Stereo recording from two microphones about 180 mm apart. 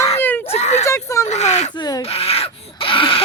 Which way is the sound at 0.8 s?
15° left (ahead or behind).